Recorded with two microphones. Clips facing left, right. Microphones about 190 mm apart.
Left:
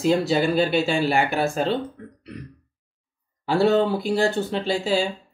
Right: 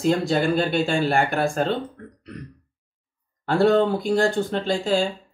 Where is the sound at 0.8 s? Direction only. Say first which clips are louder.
Even; 50° right (ahead or behind).